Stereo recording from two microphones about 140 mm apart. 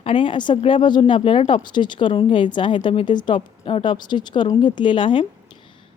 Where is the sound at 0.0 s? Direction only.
35° left (ahead or behind).